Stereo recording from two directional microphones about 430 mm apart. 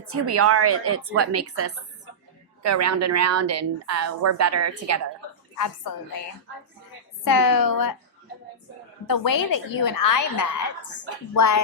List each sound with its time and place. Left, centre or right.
0.1 s a woman's voice: right
5.5 s a woman's voice: left
7.3 s a woman's voice: left
9.0 s a woman's voice: left